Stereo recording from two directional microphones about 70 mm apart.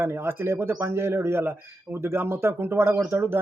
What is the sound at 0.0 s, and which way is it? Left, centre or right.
A man's voice, right.